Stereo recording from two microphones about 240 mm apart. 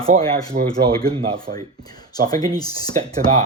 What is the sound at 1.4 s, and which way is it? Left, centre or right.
Speech, centre.